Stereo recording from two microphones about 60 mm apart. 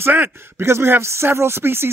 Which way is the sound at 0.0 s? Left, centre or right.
Right.